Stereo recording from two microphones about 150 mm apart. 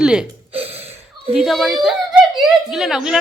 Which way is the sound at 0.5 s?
40° right (ahead or behind).